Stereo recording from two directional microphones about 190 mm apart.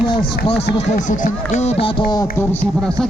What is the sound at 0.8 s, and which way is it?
Speech, 40° left (ahead or behind).